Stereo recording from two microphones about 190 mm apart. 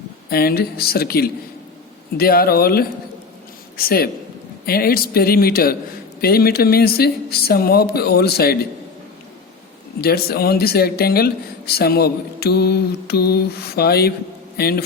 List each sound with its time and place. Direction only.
0.3 s speech: 55° left (ahead or behind)
10.0 s a man's voice: 55° left (ahead or behind)